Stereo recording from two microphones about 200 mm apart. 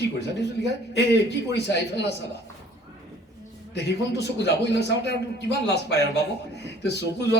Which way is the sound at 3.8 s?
55° left (ahead or behind).